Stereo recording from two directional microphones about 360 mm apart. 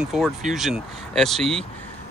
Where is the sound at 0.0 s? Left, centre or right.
Centre.